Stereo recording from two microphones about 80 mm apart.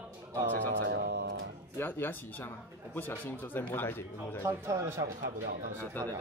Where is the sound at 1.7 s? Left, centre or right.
Left.